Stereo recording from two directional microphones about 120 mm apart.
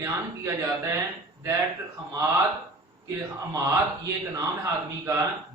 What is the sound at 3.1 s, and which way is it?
Speech, 30° right (ahead or behind).